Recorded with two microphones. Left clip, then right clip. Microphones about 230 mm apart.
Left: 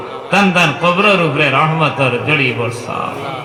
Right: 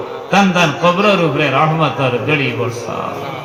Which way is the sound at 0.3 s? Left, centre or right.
Left.